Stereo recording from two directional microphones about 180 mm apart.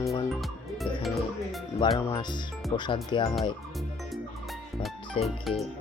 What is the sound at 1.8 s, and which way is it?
Speech, 25° left (ahead or behind).